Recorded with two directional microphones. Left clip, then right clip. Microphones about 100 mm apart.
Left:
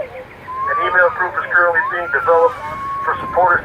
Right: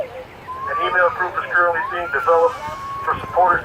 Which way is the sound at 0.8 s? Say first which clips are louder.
Left 3 dB; 40° left (ahead or behind).